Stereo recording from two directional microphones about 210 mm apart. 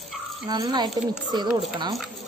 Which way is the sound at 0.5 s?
20° right (ahead or behind).